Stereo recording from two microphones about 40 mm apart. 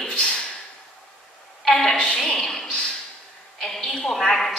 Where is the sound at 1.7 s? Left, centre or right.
Centre.